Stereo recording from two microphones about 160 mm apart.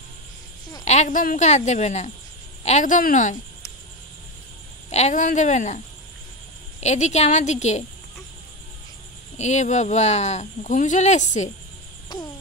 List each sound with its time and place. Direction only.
0.8 s speech: 50° left (ahead or behind)
4.8 s speech: 45° left (ahead or behind)
6.8 s speech: 45° left (ahead or behind)
9.4 s speech: 45° left (ahead or behind)